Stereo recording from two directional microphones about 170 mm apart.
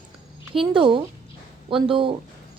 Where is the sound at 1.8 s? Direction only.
30° right (ahead or behind).